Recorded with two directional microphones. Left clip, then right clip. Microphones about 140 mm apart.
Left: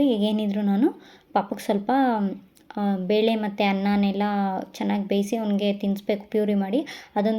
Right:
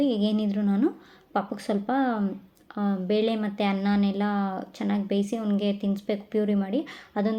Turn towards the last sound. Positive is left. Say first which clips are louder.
# left 4 dB
turn(degrees=40)  # may be behind; listen again after turning